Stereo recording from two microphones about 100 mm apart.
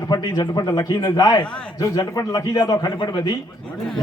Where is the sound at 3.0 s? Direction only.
50° left (ahead or behind).